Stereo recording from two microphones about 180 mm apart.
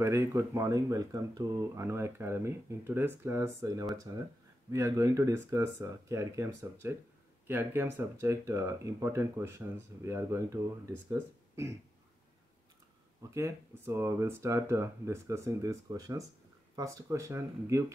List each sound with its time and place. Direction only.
0.0 s speech: 15° right (ahead or behind)
13.2 s speech: 15° right (ahead or behind)